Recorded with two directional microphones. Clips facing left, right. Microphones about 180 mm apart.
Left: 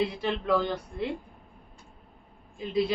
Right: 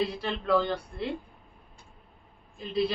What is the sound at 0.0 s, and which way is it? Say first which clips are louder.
A woman's voice: left 2 dB; 10° left (ahead or behind).